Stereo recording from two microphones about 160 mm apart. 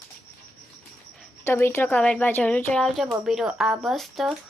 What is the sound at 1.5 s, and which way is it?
A woman's voice, 15° left (ahead or behind).